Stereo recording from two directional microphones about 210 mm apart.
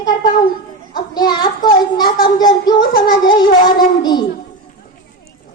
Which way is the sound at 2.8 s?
45° left (ahead or behind).